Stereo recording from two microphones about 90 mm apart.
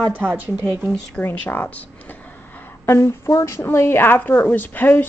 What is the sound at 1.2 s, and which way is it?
Speech, 25° left (ahead or behind).